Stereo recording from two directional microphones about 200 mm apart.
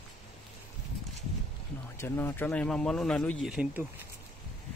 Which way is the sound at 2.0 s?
10° left (ahead or behind).